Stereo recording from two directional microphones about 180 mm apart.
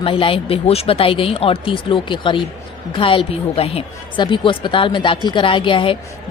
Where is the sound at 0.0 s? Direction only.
30° left (ahead or behind).